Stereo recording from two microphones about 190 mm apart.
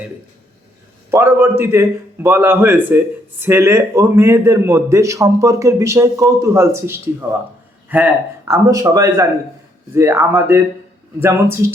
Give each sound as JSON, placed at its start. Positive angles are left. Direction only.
{"t": 1.1, "sound": "a man's voice", "side_deg": -10}